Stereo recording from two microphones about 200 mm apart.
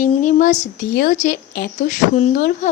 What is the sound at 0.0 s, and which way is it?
Speech, 40° left (ahead or behind).